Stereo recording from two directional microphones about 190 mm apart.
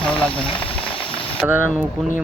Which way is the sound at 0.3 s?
25° left (ahead or behind).